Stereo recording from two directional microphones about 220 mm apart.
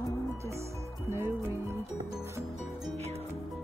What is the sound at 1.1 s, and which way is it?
Music, 10° right (ahead or behind).